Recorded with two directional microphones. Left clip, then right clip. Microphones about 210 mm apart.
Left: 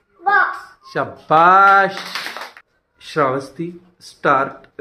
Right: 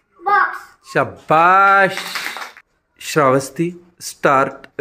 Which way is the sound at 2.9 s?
45° right (ahead or behind).